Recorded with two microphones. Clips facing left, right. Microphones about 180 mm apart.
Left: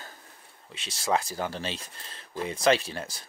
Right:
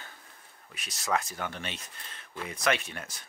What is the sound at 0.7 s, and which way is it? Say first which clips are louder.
Speech: left 3 dB; 30° left (ahead or behind).